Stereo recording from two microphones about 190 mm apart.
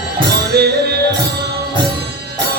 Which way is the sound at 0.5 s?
55° right (ahead or behind).